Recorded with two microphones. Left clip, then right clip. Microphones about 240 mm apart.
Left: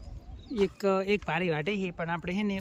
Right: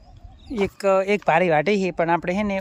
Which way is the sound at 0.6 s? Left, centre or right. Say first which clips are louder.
Right 8 dB; centre.